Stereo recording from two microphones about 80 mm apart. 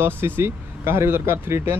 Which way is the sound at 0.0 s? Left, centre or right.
Right.